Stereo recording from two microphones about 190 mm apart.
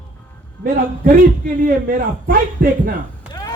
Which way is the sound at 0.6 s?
45° right (ahead or behind).